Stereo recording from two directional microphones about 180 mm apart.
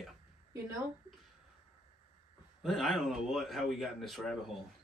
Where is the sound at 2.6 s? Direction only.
Centre (ahead or behind).